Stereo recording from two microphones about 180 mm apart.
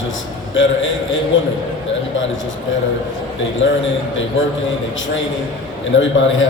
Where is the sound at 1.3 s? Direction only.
90° left.